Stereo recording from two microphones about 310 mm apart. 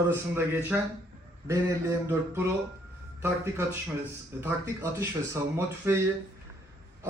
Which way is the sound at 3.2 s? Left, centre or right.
Centre.